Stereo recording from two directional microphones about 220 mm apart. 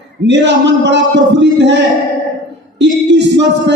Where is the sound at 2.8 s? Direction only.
55° right (ahead or behind).